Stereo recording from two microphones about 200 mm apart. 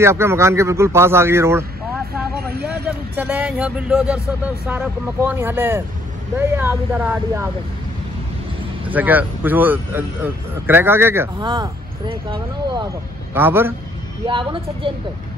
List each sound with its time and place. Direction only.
0.0 s speech: 15° right (ahead or behind)
3.2 s speech: 5° right (ahead or behind)
8.9 s speech: 10° right (ahead or behind)
11.3 s speech: 25° right (ahead or behind)
13.3 s speech: 10° right (ahead or behind)
14.2 s speech: 25° right (ahead or behind)